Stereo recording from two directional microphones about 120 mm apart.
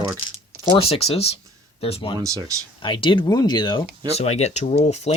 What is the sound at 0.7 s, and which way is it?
Speech, 55° left (ahead or behind).